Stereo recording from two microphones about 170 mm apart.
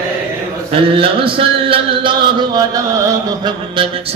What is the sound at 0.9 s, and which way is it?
Speech, 30° right (ahead or behind).